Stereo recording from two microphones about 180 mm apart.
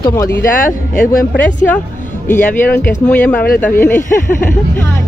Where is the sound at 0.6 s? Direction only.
50° left (ahead or behind).